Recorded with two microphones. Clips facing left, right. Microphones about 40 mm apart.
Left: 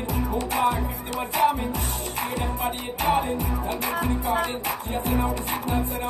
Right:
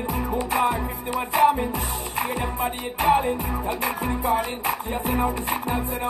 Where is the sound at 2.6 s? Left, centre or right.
Centre.